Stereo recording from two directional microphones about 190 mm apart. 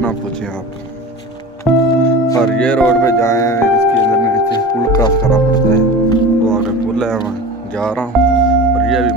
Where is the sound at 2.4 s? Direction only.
5° left (ahead or behind).